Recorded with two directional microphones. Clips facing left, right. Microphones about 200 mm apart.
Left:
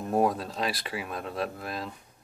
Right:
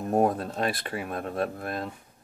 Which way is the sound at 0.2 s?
50° right (ahead or behind).